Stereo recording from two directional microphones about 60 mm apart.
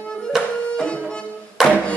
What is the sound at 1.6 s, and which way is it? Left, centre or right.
Music, centre.